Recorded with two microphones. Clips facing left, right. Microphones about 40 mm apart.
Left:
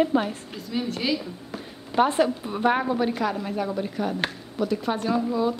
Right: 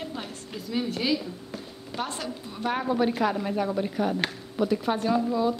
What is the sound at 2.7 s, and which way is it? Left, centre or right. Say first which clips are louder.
A woman's voice: left 1 dB; centre.